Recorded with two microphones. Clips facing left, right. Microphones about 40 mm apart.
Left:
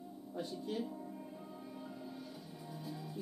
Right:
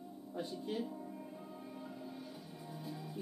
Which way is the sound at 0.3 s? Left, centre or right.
Centre.